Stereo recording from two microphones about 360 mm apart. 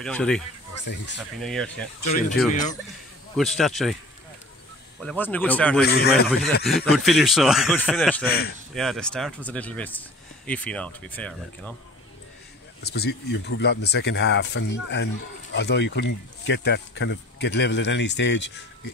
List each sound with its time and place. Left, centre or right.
0.0 s speech: centre
0.8 s speech: left
1.4 s speech: centre
2.0 s speech: left
3.3 s speech: centre
5.0 s speech: centre
5.9 s speech: left
6.6 s speech: centre
8.3 s speech: left
8.7 s speech: centre
12.8 s speech: left